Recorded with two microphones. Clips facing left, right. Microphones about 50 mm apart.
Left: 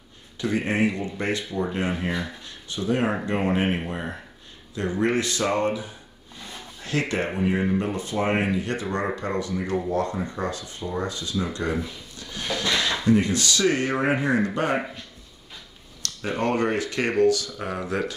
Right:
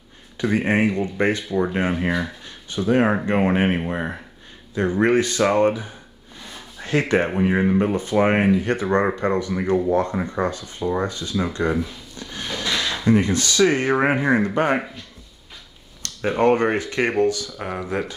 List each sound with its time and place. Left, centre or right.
0.4 s speech: right
16.0 s speech: right